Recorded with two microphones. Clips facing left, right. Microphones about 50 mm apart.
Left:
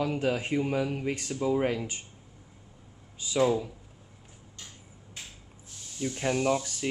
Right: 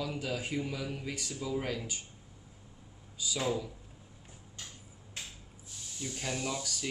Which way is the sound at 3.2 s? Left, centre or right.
Left.